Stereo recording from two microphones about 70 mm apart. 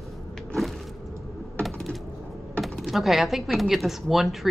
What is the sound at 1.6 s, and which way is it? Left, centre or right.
Typing, centre.